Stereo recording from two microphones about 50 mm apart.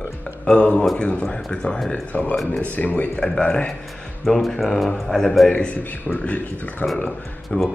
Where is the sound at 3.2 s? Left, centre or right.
Centre.